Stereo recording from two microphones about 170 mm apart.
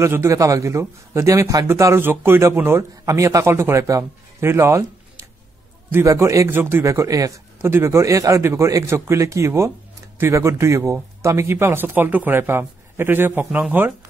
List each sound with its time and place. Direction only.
0.0 s a man's voice: 15° right (ahead or behind)